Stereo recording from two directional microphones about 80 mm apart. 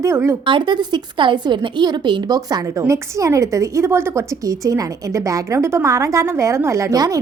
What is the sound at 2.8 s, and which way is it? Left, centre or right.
Speech, right.